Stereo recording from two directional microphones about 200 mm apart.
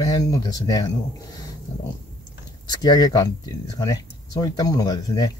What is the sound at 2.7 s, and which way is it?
Speech, 20° left (ahead or behind).